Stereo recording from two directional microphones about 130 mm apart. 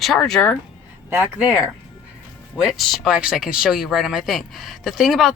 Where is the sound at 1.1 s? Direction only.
15° right (ahead or behind).